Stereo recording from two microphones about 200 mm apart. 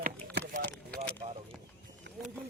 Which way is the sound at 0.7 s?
5° left (ahead or behind).